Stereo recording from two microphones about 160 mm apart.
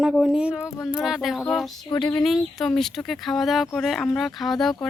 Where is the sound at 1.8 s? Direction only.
30° left (ahead or behind).